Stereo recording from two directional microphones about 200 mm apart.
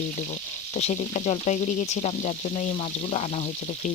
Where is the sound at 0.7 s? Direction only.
35° left (ahead or behind).